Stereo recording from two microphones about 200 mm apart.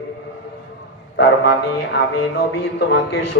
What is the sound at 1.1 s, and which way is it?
Speech, 60° left (ahead or behind).